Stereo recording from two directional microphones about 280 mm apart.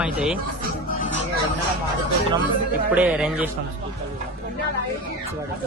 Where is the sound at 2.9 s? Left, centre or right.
Centre.